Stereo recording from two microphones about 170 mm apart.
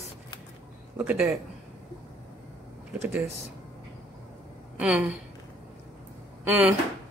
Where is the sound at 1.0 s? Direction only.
10° right (ahead or behind).